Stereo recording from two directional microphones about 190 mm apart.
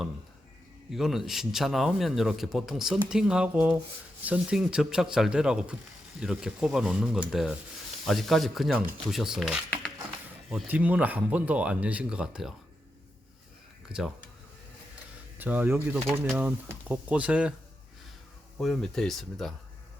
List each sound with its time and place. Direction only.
0.9 s a man's voice: centre (ahead or behind)
13.9 s speech: 50° right (ahead or behind)
15.4 s speech: 10° right (ahead or behind)
18.5 s a man's voice: centre (ahead or behind)